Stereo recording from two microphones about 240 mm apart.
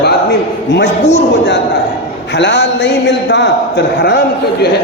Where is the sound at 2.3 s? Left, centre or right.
Left.